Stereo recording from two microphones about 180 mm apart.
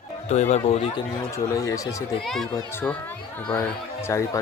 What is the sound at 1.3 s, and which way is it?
Speech, 20° left (ahead or behind).